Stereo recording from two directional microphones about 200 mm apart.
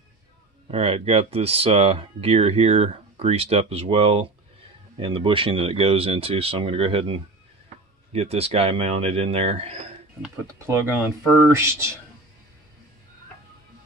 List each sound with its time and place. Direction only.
0.7 s speech: 30° right (ahead or behind)
11.2 s speech: 10° left (ahead or behind)
11.5 s speech: 15° right (ahead or behind)